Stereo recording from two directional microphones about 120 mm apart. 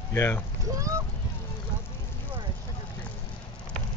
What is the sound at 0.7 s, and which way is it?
Speech, 30° right (ahead or behind).